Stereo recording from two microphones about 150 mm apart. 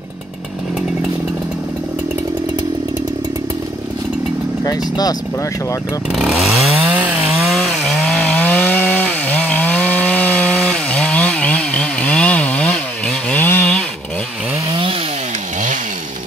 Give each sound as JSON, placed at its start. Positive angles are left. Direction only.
{"t": 4.6, "sound": "speech", "side_deg": 25}
{"t": 6.1, "sound": "speech", "side_deg": -5}
{"t": 6.8, "sound": "chainsaw", "side_deg": -10}
{"t": 14.7, "sound": "chainsaw", "side_deg": -35}